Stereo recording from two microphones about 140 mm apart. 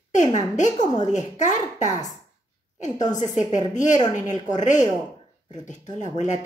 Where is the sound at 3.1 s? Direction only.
60° left (ahead or behind).